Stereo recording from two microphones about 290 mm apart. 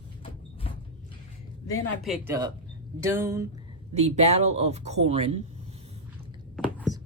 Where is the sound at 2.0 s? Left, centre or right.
Centre.